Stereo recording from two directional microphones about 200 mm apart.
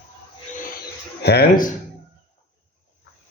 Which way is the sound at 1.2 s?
55° left (ahead or behind).